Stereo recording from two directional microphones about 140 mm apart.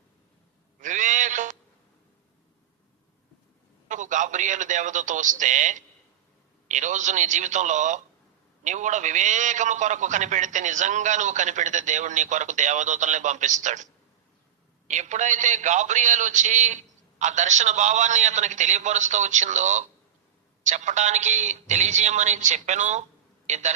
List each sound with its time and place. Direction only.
0.8 s a sound: 65° right (ahead or behind)
3.8 s a man's voice: 65° right (ahead or behind)
14.8 s a man's voice: 60° right (ahead or behind)